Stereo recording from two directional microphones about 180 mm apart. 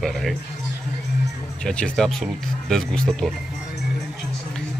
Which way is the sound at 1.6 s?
5° left (ahead or behind).